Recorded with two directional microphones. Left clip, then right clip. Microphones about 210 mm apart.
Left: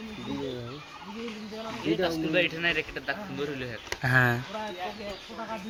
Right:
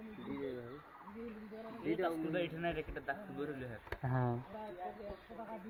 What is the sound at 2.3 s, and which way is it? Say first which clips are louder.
A man's voice: left 13 dB; 55° right (ahead or behind).